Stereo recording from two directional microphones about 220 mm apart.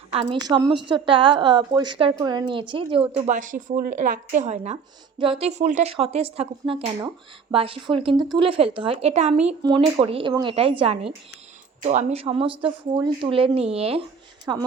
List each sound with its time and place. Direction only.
0.1 s speech: 25° right (ahead or behind)
14.5 s speech: 15° right (ahead or behind)